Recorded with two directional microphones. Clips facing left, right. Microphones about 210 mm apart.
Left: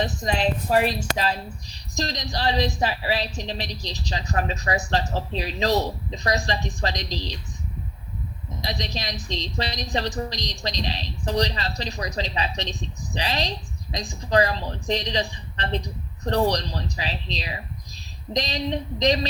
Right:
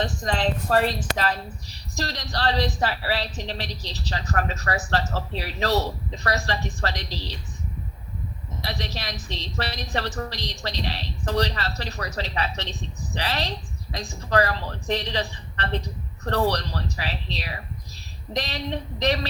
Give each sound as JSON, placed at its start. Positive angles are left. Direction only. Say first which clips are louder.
{"t": 0.2, "sound": "a woman's voice", "louder": "left 1 dB", "side_deg": 10}
{"t": 8.6, "sound": "a woman's voice", "louder": "left 2 dB", "side_deg": 15}